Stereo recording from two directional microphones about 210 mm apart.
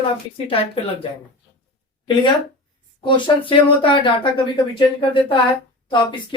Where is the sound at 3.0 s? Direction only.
25° left (ahead or behind).